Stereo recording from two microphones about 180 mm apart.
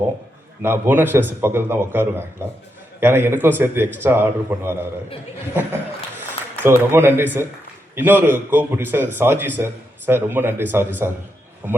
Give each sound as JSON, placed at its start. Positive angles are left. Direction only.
{"t": 0.6, "sound": "a man's voice", "side_deg": -10}
{"t": 6.6, "sound": "a man's voice", "side_deg": -10}